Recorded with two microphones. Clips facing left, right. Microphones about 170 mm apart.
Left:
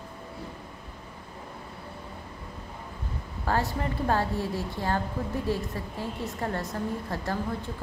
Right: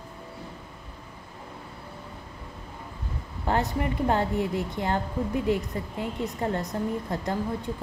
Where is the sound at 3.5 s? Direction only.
20° right (ahead or behind).